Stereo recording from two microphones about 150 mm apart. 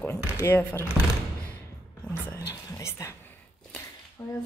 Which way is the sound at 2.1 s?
20° left (ahead or behind).